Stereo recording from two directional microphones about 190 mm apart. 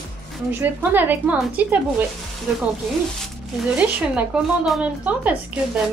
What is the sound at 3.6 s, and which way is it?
Speech, 5° right (ahead or behind).